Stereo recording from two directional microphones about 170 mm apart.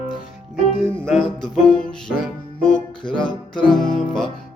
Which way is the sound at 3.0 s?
30° left (ahead or behind).